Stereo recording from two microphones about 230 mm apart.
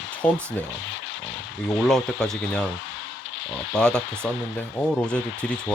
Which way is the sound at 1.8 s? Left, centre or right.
Centre.